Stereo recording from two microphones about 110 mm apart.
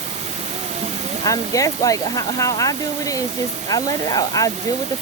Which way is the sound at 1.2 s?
30° left (ahead or behind).